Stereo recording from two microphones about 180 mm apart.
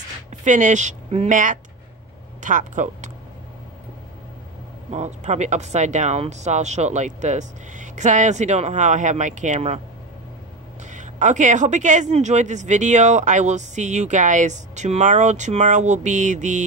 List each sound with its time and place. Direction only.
0.4 s a woman's voice: 45° right (ahead or behind)
4.9 s a woman's voice: 40° right (ahead or behind)
10.9 s a woman's voice: 45° right (ahead or behind)